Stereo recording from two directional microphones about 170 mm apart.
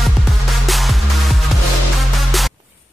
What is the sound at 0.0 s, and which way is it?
Music, centre (ahead or behind).